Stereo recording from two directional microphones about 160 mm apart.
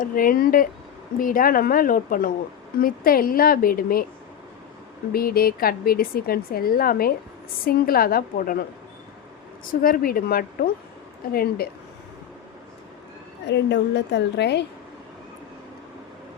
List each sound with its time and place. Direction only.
0.0 s a woman's voice: 60° left (ahead or behind)
5.1 s a woman's voice: 70° left (ahead or behind)
9.8 s a woman's voice: 65° left (ahead or behind)
13.5 s a woman's voice: 90° left